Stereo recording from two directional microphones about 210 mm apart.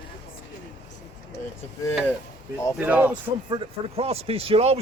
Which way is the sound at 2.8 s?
10° right (ahead or behind).